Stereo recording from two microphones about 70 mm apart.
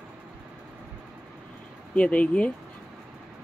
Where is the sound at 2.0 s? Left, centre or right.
Centre.